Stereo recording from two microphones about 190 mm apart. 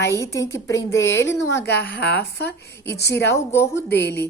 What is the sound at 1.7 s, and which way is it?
A woman's voice, 60° left (ahead or behind).